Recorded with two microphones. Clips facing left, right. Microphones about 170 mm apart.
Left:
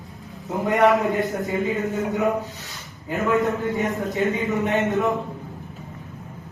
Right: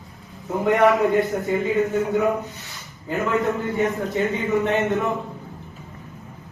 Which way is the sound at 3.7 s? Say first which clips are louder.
Right 2 dB; 20° left (ahead or behind).